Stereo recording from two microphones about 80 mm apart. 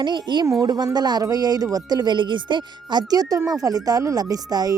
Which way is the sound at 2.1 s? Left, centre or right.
Right.